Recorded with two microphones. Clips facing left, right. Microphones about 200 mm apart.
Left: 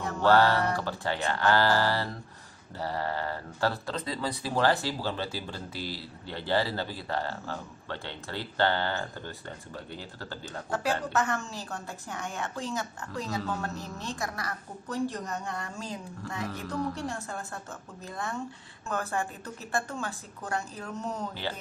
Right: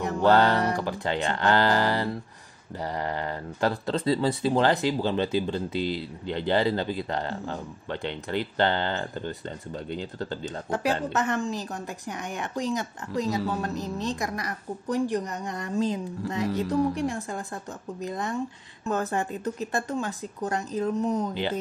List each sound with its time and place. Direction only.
0.2 s speech: 20° right (ahead or behind)